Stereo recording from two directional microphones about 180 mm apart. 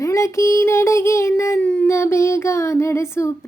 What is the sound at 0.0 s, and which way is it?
Child singing, 15° left (ahead or behind).